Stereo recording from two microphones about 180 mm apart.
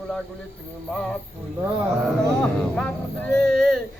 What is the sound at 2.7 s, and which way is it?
Speech, 5° left (ahead or behind).